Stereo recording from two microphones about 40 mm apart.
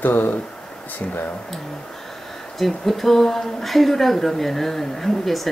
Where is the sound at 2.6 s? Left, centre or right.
Centre.